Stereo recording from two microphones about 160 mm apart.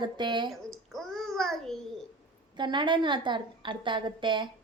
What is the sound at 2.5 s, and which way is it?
A woman's voice, 30° right (ahead or behind).